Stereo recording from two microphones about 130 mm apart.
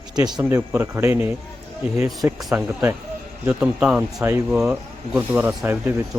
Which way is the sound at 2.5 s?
15° right (ahead or behind).